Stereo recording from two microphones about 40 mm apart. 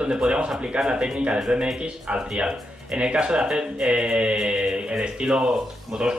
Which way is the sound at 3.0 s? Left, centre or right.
Right.